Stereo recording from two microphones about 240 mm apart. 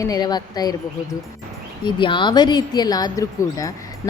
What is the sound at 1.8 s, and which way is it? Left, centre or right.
Speech, centre.